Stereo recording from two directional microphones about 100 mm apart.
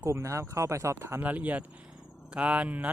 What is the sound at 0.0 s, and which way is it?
Speech, 30° right (ahead or behind).